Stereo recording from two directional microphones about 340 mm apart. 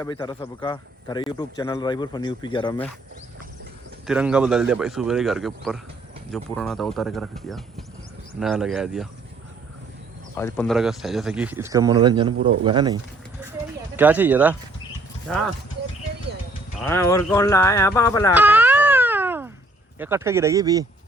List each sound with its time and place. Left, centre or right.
0.0 s a man's voice: centre
4.0 s speech: centre
10.3 s speech: centre
16.8 s a man's voice: centre
18.3 s a sound: centre
20.0 s speech: centre